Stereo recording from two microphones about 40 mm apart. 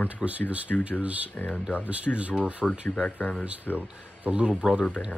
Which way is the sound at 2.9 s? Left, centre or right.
Left.